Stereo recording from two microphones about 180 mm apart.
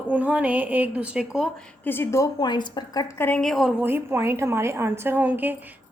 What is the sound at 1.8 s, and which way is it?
A woman's voice, 10° left (ahead or behind).